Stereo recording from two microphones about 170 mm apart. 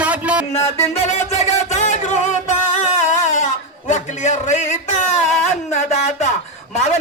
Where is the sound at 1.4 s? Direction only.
45° left (ahead or behind).